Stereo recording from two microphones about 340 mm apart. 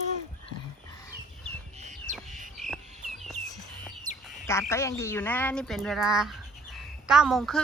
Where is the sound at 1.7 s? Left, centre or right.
Right.